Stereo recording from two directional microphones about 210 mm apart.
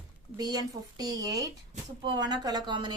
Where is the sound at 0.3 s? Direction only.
20° right (ahead or behind).